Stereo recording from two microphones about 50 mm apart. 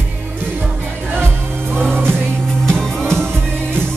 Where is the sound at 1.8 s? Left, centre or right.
Right.